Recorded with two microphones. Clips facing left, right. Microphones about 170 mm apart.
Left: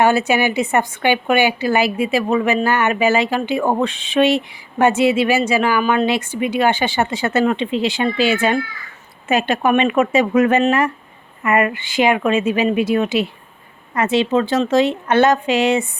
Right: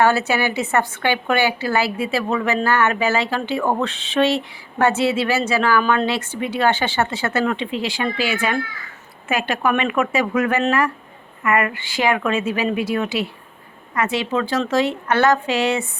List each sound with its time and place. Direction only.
0.0 s a woman's voice: 15° left (ahead or behind)